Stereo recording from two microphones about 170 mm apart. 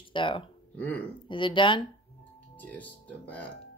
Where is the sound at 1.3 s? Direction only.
30° left (ahead or behind).